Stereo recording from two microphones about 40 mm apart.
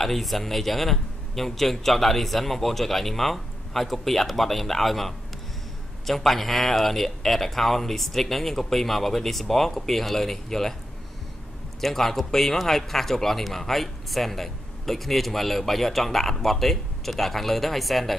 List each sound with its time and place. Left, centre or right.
0.0 s speech: centre
11.8 s speech: centre